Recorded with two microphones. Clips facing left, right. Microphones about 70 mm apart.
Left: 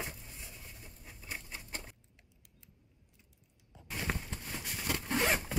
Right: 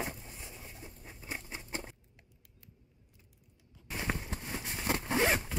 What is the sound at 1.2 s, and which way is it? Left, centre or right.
Patter, centre.